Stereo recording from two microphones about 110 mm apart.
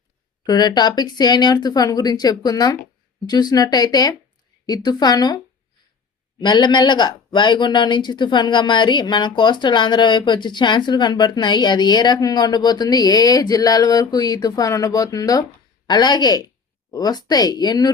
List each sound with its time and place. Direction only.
0.4 s speech: 40° left (ahead or behind)
6.4 s speech: 40° left (ahead or behind)